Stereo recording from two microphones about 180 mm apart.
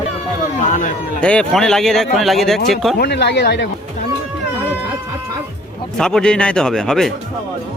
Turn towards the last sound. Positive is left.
turn(degrees=5)  # may be behind; listen again after turning